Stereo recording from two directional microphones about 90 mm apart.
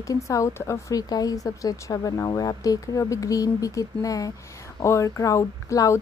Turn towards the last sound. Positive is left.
turn(degrees=35)  # may be behind; listen again after turning